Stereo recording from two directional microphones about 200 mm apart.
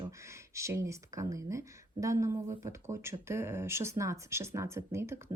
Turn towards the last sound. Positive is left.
turn(degrees=-15)  # may be behind; listen again after turning